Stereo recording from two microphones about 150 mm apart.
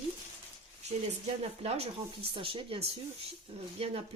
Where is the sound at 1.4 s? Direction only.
40° right (ahead or behind).